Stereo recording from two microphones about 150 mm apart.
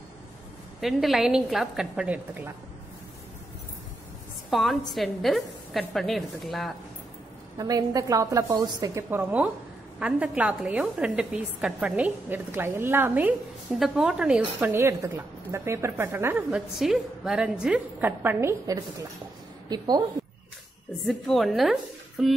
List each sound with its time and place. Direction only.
0.7 s a woman's voice: centre (ahead or behind)
4.5 s a woman's voice: centre (ahead or behind)
7.5 s a woman's voice: 25° right (ahead or behind)
16.4 s a woman's voice: centre (ahead or behind); by 19.0 s 20° right (ahead or behind)
21.0 s a woman's voice: centre (ahead or behind)